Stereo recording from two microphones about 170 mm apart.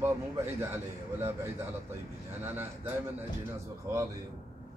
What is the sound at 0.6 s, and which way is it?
A man's voice, 15° right (ahead or behind).